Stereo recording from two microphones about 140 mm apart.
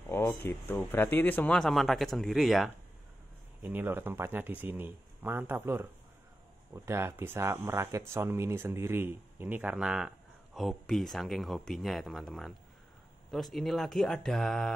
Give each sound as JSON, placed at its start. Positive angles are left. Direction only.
{"t": 0.1, "sound": "speech", "side_deg": 20}
{"t": 3.6, "sound": "speech", "side_deg": -15}